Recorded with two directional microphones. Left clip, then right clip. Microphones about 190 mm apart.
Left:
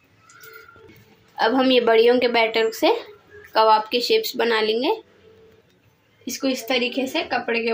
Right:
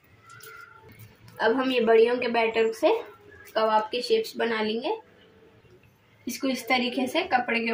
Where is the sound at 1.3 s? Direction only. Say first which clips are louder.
Left 6 dB; 40° left (ahead or behind).